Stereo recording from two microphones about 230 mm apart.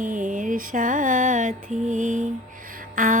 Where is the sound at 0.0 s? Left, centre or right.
Right.